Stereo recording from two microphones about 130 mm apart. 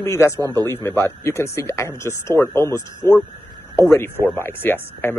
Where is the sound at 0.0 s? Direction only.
20° left (ahead or behind).